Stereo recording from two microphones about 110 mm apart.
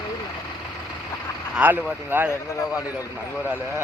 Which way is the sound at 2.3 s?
30° left (ahead or behind).